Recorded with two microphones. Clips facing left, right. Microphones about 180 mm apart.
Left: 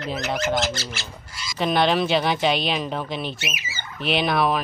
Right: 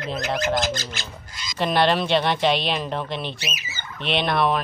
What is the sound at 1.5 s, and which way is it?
Speech, centre (ahead or behind).